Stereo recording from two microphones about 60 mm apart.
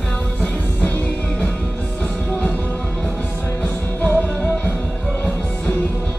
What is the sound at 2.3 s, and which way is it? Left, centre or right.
Music, left.